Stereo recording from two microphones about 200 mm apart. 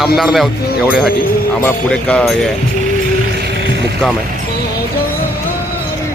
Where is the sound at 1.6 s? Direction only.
10° left (ahead or behind).